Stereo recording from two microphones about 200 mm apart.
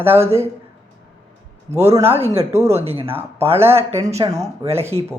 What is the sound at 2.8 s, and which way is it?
Speech, 30° right (ahead or behind).